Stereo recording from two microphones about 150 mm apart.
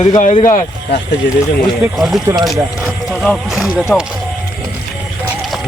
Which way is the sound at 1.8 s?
Centre (ahead or behind).